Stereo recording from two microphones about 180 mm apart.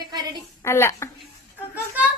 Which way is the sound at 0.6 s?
15° left (ahead or behind).